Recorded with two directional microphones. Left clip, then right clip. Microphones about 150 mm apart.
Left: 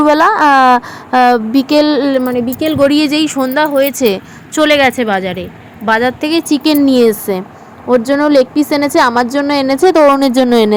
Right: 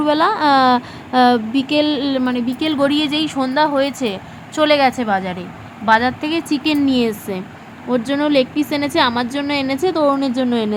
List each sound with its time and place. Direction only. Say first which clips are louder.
0.0 s speech: left 7 dB; 35° left (ahead or behind)
2.6 s speech: left 7 dB; 15° left (ahead or behind)
2.9 s a woman's voice: left 6 dB; 30° left (ahead or behind)
4.0 s a woman's voice: left 10 dB; 35° left (ahead or behind)
10.1 s a woman's voice: left 8 dB; 50° left (ahead or behind)